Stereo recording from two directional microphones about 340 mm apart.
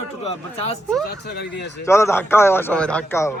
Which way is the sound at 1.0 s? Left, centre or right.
Left.